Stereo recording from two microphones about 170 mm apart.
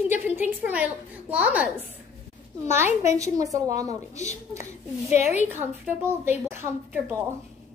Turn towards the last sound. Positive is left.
turn(degrees=-10)  # may be behind; listen again after turning